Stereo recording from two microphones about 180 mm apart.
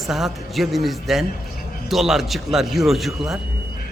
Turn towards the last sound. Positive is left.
turn(degrees=0)  # may be behind; listen again after turning